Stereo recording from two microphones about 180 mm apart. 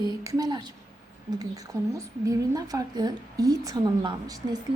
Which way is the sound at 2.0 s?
20° right (ahead or behind).